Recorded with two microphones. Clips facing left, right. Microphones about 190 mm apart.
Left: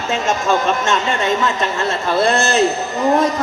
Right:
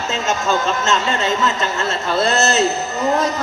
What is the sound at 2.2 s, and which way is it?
Speech, 30° left (ahead or behind).